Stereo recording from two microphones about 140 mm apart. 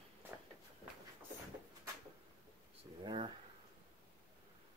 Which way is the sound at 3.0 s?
35° right (ahead or behind).